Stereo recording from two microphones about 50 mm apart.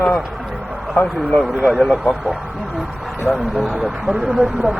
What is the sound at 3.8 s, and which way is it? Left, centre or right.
Speech, centre.